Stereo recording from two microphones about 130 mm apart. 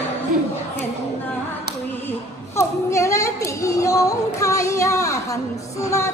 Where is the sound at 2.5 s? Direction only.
25° left (ahead or behind).